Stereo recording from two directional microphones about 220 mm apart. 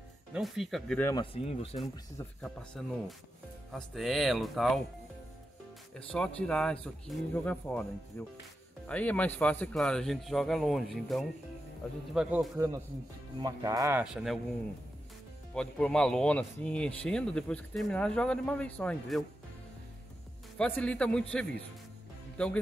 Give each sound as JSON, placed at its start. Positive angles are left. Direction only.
{"t": 0.3, "sound": "speech", "side_deg": 0}
{"t": 1.1, "sound": "speech", "side_deg": 25}
{"t": 2.1, "sound": "speech", "side_deg": 5}
{"t": 5.9, "sound": "speech", "side_deg": 5}
{"t": 8.2, "sound": "music", "side_deg": 10}
{"t": 8.8, "sound": "speech", "side_deg": 5}
{"t": 12.5, "sound": "speech", "side_deg": -15}
{"t": 14.1, "sound": "speech", "side_deg": 0}
{"t": 15.5, "sound": "speech", "side_deg": 5}
{"t": 20.5, "sound": "speech", "side_deg": 5}